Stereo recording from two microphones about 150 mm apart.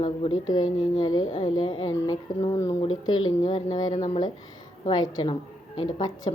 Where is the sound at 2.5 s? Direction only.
20° left (ahead or behind).